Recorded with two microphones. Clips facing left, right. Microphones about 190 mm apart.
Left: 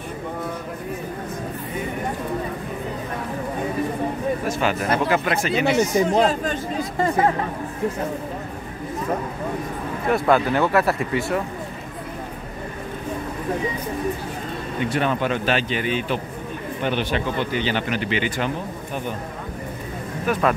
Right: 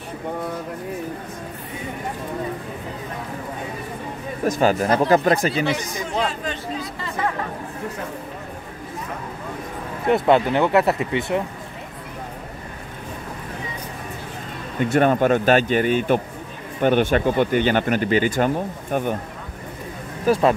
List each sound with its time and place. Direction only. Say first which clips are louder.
4.5 s speech: right 8 dB; 40° right (ahead or behind)
5.9 s speech: left 7 dB; 40° left (ahead or behind)
10.0 s speech: right 2 dB; 25° right (ahead or behind)
14.8 s speech: right 6 dB; 45° right (ahead or behind)
20.2 s speech: right 4 dB; 30° right (ahead or behind)